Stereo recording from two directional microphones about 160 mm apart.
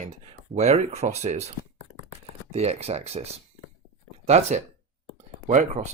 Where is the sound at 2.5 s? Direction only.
40° right (ahead or behind).